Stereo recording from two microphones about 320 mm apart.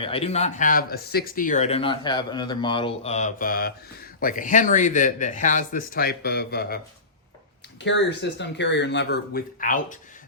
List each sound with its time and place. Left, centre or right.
0.0 s speech: centre
7.9 s speech: left